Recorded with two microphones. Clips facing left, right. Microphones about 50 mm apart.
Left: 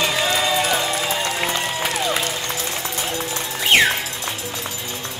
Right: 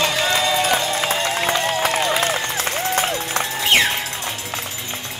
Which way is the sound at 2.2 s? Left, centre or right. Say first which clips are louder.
Right 4 dB; right.